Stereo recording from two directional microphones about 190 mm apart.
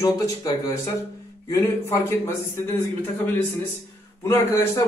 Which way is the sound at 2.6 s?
10° left (ahead or behind).